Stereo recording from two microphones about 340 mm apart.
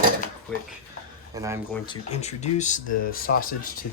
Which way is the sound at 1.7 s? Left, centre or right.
Centre.